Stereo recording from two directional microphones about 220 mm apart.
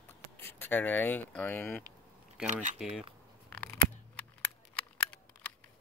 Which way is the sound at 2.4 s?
35° right (ahead or behind).